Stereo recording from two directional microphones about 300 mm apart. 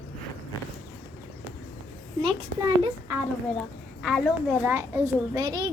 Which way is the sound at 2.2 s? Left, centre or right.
Centre.